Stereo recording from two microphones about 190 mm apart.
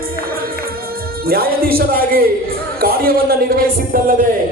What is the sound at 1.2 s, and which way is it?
A man's voice, 55° right (ahead or behind).